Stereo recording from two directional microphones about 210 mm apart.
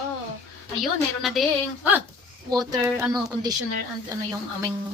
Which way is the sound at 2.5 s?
20° right (ahead or behind).